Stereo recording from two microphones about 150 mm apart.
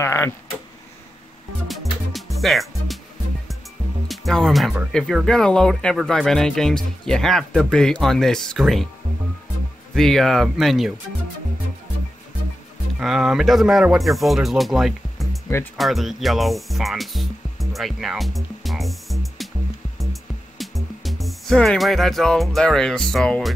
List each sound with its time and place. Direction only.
0.0 s speech: 15° left (ahead or behind)
1.7 s music: centre (ahead or behind)
4.1 s speech: centre (ahead or behind)
9.9 s speech: centre (ahead or behind)
13.0 s speech: 5° right (ahead or behind)
15.4 s music: 15° left (ahead or behind)
15.8 s speech: centre (ahead or behind)
20.0 s music: centre (ahead or behind)